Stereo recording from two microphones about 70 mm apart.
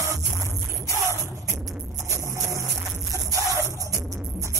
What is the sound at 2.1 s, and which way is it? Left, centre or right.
Music, right.